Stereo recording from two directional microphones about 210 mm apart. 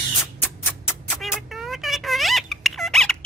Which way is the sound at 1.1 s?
5° left (ahead or behind).